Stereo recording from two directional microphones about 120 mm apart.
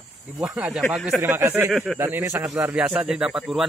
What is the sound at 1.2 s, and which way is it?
Speech, 20° right (ahead or behind).